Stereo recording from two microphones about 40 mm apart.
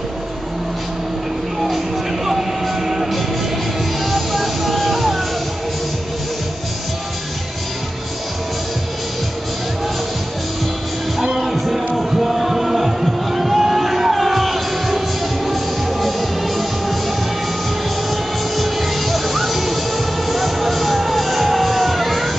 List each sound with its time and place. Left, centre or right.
2.2 s music: centre
11.3 s music: centre
18.1 s music: centre